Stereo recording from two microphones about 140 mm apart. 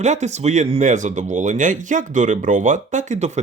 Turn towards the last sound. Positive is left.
turn(degrees=-55)  # may be behind; listen again after turning